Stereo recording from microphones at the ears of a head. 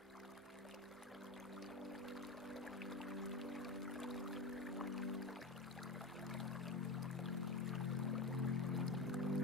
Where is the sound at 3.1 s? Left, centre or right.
Centre.